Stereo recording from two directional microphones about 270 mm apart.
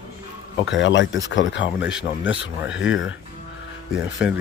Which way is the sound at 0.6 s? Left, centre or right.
Left.